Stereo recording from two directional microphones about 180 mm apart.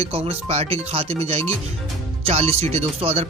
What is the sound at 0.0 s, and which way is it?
Speech, 35° right (ahead or behind).